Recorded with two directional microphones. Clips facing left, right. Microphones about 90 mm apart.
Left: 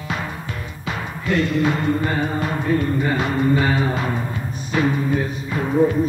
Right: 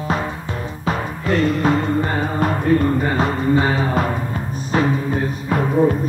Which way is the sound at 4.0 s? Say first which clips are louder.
Right 3 dB; 45° right (ahead or behind).